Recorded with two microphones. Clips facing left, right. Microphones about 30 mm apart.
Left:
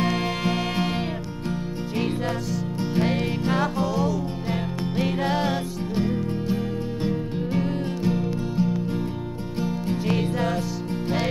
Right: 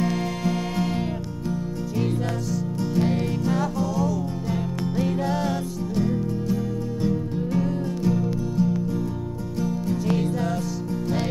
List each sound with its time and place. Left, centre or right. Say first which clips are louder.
0.0 s music: left 1 dB; left